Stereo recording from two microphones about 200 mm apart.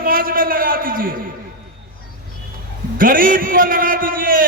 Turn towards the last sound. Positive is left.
turn(degrees=-45)  # may be behind; listen again after turning